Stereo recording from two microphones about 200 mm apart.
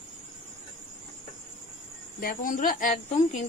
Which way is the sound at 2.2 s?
45° left (ahead or behind).